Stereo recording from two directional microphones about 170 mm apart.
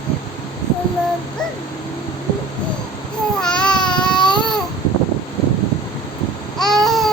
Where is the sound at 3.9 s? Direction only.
25° left (ahead or behind).